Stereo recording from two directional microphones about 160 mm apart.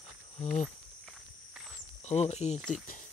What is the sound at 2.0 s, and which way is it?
Speech, 45° left (ahead or behind).